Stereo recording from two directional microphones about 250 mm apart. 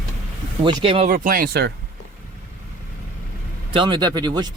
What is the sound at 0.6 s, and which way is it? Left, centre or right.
Speech, centre.